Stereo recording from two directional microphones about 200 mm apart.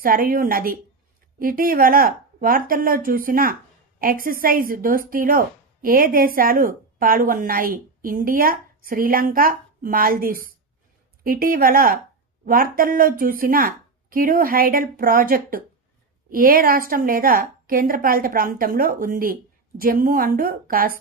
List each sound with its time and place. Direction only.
0.0 s speech: 45° right (ahead or behind)